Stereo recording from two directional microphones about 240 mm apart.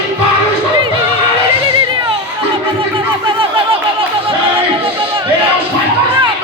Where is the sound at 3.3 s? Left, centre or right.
Right.